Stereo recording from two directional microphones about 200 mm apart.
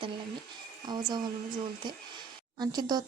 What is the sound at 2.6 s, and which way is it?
Speech, 20° right (ahead or behind).